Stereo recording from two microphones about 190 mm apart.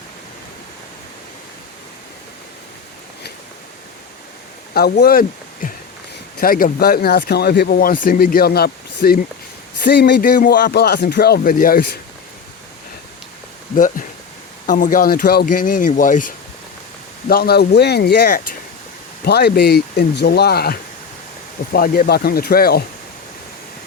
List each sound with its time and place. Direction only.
4.7 s speech: 55° left (ahead or behind)
13.7 s speech: 45° left (ahead or behind)